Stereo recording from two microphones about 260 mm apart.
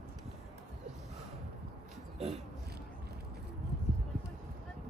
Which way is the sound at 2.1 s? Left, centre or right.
Right.